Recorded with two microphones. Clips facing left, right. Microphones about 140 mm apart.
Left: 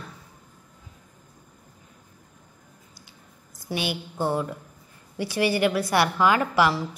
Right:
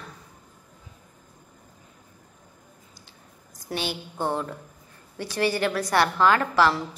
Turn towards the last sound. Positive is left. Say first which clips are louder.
# even
turn(degrees=10)  # may be behind; listen again after turning